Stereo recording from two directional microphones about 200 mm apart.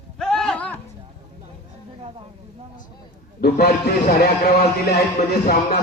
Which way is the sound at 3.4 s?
55° left (ahead or behind).